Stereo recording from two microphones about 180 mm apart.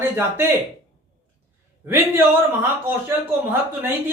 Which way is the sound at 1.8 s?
10° right (ahead or behind).